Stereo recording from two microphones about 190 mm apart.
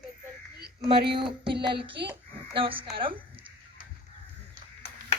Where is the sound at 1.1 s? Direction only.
25° right (ahead or behind).